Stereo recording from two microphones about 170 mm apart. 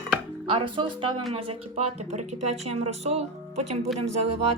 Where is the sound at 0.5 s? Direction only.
30° right (ahead or behind).